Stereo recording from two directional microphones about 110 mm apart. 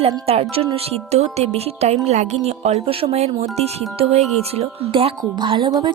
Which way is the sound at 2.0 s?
90° right.